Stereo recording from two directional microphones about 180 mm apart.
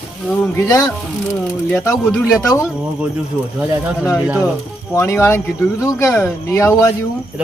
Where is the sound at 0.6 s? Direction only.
20° left (ahead or behind).